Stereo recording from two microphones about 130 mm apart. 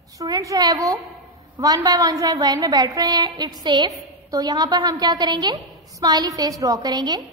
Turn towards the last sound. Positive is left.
turn(degrees=-30)  # may be behind; listen again after turning